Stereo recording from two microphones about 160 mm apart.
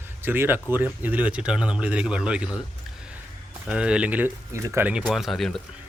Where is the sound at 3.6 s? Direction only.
5° right (ahead or behind).